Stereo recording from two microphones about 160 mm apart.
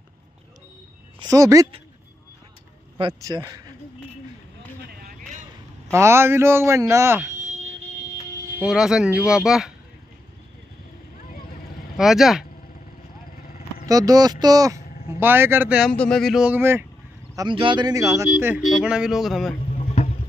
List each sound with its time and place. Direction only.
1.2 s speech: 20° right (ahead or behind)
3.0 s speech: 25° right (ahead or behind)
5.9 s speech: 15° right (ahead or behind)
8.5 s speech: 5° right (ahead or behind)
12.0 s speech: centre (ahead or behind)
13.8 s speech: 20° right (ahead or behind)
15.9 s speech: 5° left (ahead or behind); by 16.8 s 15° right (ahead or behind)
17.4 s speech: 30° right (ahead or behind); by 18.6 s 15° right (ahead or behind)
18.7 s speech: 5° right (ahead or behind)
19.5 s boat: 40° left (ahead or behind)